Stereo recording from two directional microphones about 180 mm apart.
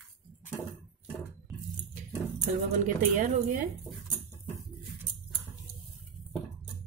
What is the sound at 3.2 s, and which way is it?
Speech, 40° right (ahead or behind).